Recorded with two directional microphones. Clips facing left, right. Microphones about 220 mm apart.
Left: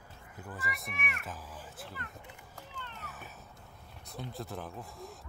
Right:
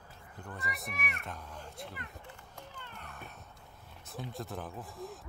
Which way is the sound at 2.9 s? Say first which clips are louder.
Even; 5° left (ahead or behind).